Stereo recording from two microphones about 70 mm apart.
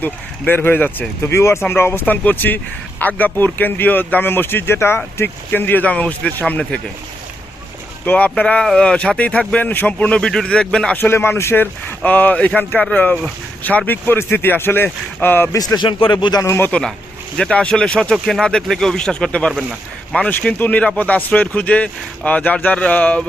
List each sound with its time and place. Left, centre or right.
0.0 s speech: left
1.2 s speech: left; by 6.7 s centre
8.0 s speech: left
10.0 s speech: centre
10.9 s speech: left
15.5 s speech: left
16.4 s speech: left
17.5 s speech: centre
18.1 s speech: centre; by 23.2 s left